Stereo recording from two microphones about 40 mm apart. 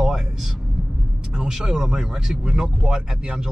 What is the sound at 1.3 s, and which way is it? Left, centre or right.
Speech, centre.